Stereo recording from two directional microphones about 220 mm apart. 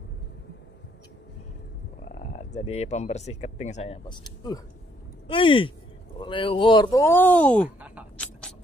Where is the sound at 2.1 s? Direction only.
35° left (ahead or behind); by 7.6 s 5° left (ahead or behind).